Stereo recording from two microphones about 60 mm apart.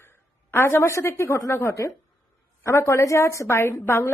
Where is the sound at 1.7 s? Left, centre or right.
Left.